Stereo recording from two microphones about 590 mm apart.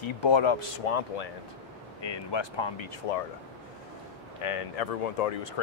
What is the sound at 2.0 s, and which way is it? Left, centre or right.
Speech, left.